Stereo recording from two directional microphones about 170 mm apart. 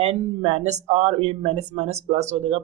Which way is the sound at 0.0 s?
40° right (ahead or behind).